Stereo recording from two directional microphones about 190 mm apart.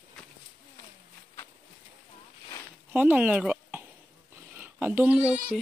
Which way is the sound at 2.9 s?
10° right (ahead or behind).